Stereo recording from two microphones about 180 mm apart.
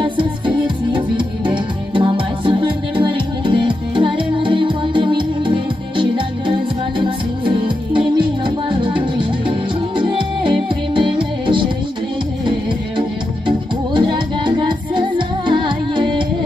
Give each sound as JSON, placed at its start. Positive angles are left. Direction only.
{"t": 0.0, "sound": "music", "side_deg": -25}
{"t": 13.5, "sound": "music", "side_deg": -25}